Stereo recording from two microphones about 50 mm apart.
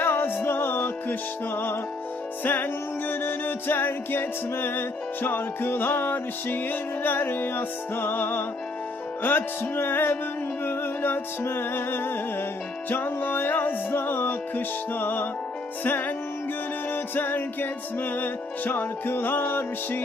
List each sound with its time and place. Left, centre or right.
0.0 s music: left